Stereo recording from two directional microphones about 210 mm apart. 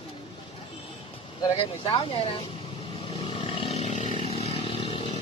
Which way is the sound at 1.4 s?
25° left (ahead or behind).